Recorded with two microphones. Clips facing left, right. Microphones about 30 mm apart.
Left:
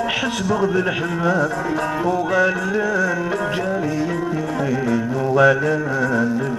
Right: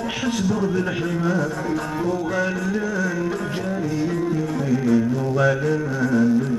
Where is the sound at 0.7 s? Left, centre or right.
Centre.